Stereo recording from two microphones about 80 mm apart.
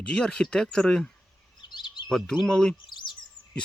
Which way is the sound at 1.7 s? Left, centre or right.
Left.